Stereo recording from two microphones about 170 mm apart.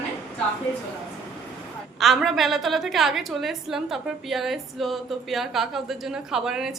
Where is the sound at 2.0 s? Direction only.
Centre (ahead or behind).